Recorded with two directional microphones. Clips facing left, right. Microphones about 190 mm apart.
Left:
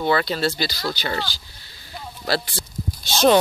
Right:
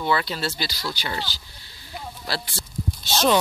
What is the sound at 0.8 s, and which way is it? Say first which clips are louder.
Speech: left 4 dB; 45° left (ahead or behind).